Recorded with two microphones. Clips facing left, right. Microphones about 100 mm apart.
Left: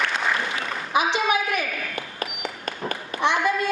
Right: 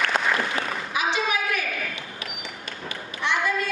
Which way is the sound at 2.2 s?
45° left (ahead or behind).